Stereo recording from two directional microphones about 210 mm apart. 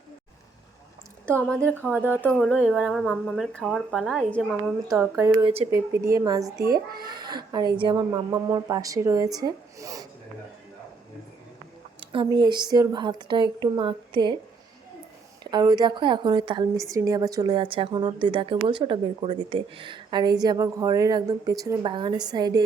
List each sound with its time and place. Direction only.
1.4 s speech: 5° left (ahead or behind)
1.8 s a woman's voice: 10° right (ahead or behind)
2.2 s speech: 5° left (ahead or behind)
5.1 s a woman's voice: 15° right (ahead or behind)
11.9 s a woman's voice: 20° right (ahead or behind)
15.4 s a woman's voice: 20° right (ahead or behind)